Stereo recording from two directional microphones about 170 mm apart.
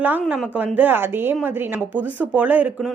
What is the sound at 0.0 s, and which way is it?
Speech, 10° right (ahead or behind).